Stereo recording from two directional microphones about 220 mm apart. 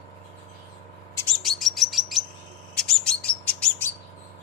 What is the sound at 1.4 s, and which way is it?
Chirp, centre (ahead or behind).